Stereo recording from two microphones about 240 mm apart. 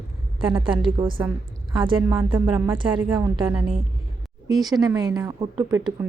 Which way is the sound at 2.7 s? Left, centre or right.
Centre.